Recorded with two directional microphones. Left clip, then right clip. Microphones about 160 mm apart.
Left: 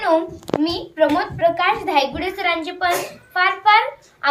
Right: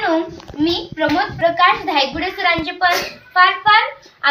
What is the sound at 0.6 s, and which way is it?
A child's voice, 45° left (ahead or behind).